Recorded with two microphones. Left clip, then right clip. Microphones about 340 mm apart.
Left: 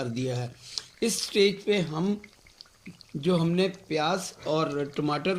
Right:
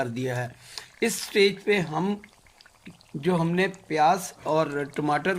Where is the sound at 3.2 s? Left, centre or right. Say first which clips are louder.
Right 1 dB; right.